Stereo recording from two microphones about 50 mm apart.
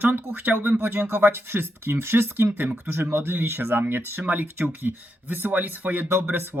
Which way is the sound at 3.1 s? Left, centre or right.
Right.